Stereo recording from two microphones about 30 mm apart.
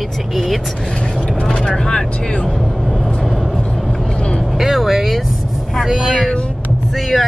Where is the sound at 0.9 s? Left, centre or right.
Left.